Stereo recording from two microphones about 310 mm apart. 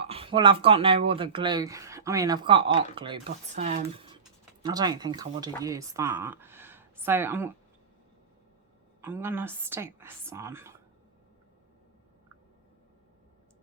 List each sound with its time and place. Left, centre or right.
0.0 s a woman's voice: centre
9.0 s speech: centre